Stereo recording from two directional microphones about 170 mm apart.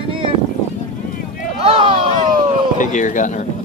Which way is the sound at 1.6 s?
30° right (ahead or behind).